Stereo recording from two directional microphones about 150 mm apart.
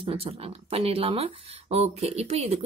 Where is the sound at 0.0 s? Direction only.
40° right (ahead or behind).